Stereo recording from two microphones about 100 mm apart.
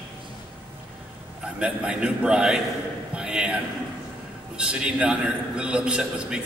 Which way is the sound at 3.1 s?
10° right (ahead or behind).